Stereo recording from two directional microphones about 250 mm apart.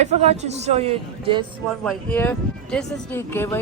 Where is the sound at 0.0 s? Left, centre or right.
Right.